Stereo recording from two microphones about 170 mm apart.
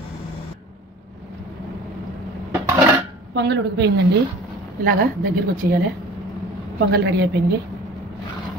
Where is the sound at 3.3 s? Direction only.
85° right.